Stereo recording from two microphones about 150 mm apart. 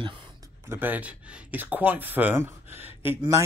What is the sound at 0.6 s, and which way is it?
Speech, 15° right (ahead or behind).